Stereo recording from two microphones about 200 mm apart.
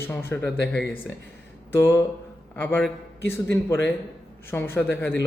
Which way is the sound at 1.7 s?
10° left (ahead or behind).